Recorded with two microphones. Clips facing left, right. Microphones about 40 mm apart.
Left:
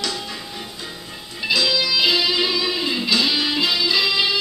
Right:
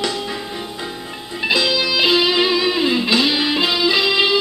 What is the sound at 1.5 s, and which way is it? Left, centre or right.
Music, right.